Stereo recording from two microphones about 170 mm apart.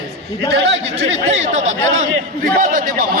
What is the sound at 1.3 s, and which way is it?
Speech, 40° right (ahead or behind).